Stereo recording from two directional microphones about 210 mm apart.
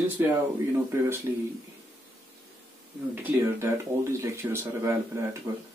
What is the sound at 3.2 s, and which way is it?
Speech, 10° right (ahead or behind).